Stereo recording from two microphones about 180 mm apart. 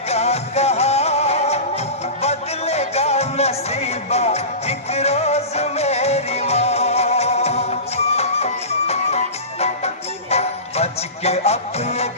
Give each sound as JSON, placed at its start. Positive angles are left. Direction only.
{"t": 0.1, "sound": "music", "side_deg": 35}